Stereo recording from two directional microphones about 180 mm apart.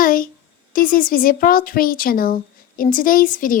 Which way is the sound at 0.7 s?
50° left (ahead or behind).